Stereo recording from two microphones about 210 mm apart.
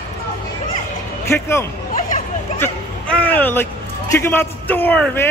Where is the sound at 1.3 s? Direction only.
10° left (ahead or behind).